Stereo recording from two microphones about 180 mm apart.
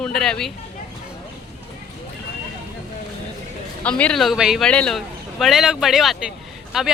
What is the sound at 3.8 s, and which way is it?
Speech, 5° left (ahead or behind).